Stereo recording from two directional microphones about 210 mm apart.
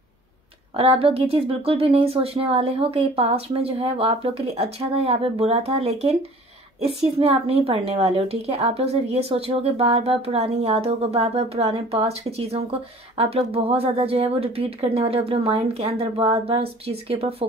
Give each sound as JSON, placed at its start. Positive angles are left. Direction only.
{"t": 0.7, "sound": "a woman's voice", "side_deg": -25}